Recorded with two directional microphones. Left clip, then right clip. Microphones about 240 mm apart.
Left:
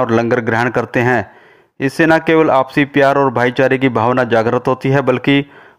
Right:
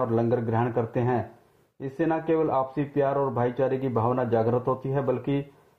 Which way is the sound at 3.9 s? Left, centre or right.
Left.